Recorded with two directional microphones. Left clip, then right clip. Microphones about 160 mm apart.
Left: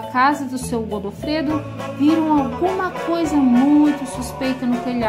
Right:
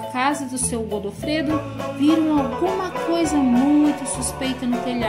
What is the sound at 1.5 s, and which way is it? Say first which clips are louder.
Speech: even; centre (ahead or behind).